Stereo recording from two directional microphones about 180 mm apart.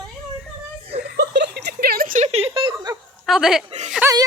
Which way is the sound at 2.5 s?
20° right (ahead or behind).